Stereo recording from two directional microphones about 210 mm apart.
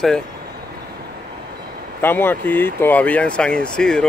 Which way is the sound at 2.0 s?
10° left (ahead or behind).